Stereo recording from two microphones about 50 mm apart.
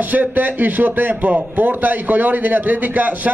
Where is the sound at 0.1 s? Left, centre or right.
Right.